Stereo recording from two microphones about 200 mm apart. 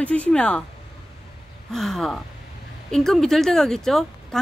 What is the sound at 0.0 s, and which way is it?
Speech, 5° left (ahead or behind).